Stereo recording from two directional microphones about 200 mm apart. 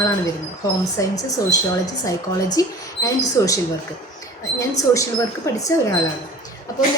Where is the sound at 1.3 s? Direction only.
15° left (ahead or behind).